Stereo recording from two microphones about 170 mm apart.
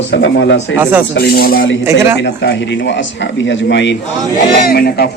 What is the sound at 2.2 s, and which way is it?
A man's voice, 85° left.